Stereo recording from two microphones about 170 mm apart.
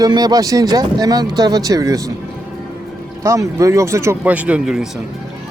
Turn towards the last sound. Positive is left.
turn(degrees=-5)  # may be behind; listen again after turning